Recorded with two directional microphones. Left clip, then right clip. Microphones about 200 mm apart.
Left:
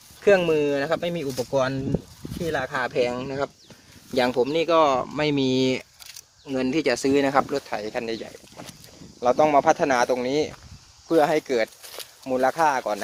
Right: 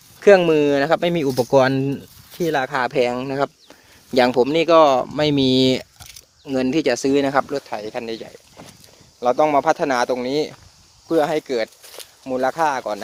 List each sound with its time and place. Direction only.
0.2 s speech: 45° right (ahead or behind); by 13.0 s 20° right (ahead or behind)